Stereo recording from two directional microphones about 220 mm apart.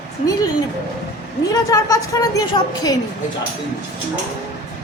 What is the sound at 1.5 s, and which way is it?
A woman's voice, 15° left (ahead or behind).